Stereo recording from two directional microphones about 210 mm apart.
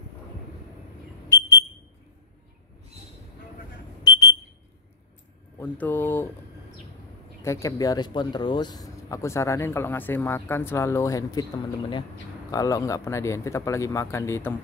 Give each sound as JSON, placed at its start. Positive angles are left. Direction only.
{"t": 4.1, "sound": "smoke detector", "side_deg": 20}
{"t": 5.6, "sound": "speech", "side_deg": 10}
{"t": 7.4, "sound": "speech", "side_deg": 15}